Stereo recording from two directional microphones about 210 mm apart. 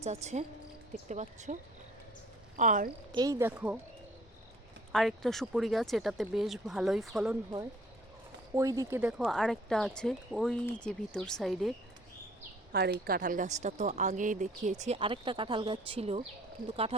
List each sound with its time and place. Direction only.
0.0 s a woman's voice: 35° right (ahead or behind)
2.6 s a woman's voice: 40° right (ahead or behind)
3.1 s speech: 20° right (ahead or behind)
4.9 s speech: centre (ahead or behind)
8.5 s speech: 15° right (ahead or behind); by 11.7 s centre (ahead or behind)
12.7 s a woman's voice: 50° right (ahead or behind); by 16.2 s 25° right (ahead or behind)